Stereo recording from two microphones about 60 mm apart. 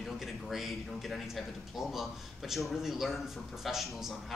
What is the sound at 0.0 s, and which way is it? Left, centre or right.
Speech, centre.